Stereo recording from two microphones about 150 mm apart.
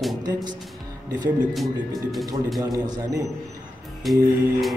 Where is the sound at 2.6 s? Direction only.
25° right (ahead or behind).